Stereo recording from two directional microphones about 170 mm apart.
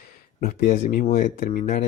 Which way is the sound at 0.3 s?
45° left (ahead or behind).